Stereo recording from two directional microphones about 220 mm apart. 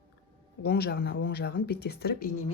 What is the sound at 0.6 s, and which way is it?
Speech, 45° left (ahead or behind).